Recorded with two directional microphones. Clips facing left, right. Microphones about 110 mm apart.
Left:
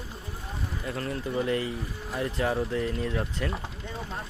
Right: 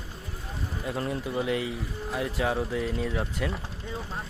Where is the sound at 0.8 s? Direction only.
20° right (ahead or behind); by 3.5 s centre (ahead or behind).